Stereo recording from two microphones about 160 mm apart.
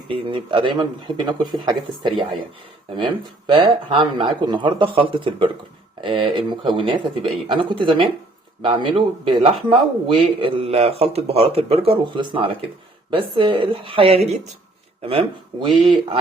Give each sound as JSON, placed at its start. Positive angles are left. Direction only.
{"t": 0.1, "sound": "a man's voice", "side_deg": -30}
{"t": 15.6, "sound": "a man's voice", "side_deg": -30}